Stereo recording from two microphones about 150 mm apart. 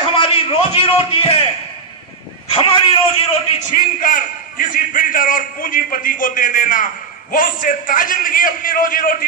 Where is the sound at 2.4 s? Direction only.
40° left (ahead or behind).